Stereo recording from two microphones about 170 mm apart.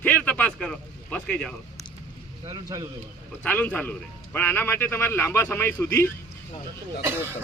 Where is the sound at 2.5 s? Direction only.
25° right (ahead or behind).